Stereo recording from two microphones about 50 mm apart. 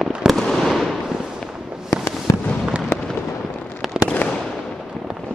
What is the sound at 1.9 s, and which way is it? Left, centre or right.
Fireworks, left.